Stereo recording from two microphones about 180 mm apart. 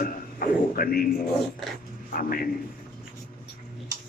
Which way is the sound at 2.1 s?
55° left (ahead or behind).